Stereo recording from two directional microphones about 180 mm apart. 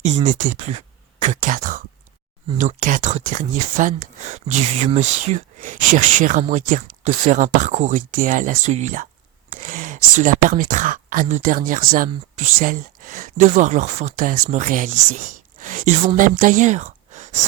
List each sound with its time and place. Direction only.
0.0 s speech: 35° right (ahead or behind)
0.3 s speech: 45° right (ahead or behind)
0.7 s speech: 35° right (ahead or behind)